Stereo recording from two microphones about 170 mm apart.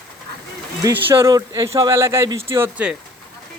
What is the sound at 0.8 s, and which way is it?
Speech, 15° right (ahead or behind).